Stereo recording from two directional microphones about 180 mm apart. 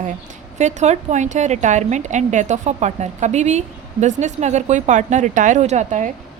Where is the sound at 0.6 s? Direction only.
40° right (ahead or behind).